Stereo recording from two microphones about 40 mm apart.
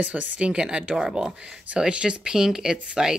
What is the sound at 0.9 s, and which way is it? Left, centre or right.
Speech, centre.